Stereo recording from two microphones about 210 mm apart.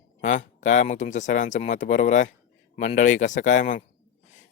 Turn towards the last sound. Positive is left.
turn(degrees=35)  # may be behind; listen again after turning